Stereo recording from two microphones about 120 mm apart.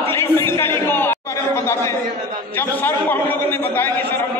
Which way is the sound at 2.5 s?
15° left (ahead or behind).